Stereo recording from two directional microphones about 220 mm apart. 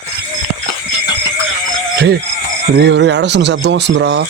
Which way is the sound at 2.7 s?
50° right (ahead or behind).